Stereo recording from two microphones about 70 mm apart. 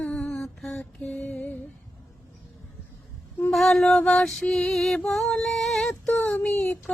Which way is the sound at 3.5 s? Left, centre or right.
Centre.